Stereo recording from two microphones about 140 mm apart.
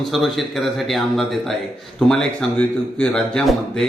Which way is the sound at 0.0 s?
Centre (ahead or behind).